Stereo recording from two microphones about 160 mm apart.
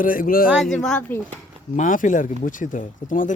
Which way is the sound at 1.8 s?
55° left (ahead or behind).